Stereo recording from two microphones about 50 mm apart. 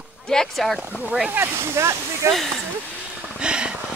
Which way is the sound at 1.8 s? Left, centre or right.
Right.